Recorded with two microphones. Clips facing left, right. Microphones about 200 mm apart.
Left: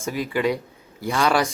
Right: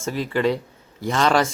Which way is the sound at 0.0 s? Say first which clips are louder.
Right 1 dB; 10° left (ahead or behind).